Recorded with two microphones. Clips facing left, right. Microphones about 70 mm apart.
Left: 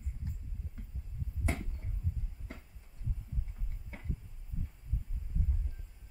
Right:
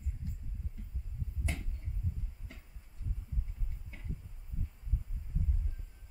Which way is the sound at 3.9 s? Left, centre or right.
Left.